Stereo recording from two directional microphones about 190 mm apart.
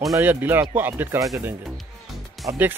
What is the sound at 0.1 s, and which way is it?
Speech, 10° right (ahead or behind).